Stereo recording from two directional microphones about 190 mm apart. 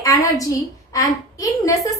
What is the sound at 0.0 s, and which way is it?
A woman's voice, 15° left (ahead or behind).